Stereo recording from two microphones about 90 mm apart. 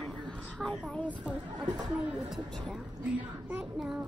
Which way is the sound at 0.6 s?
5° left (ahead or behind).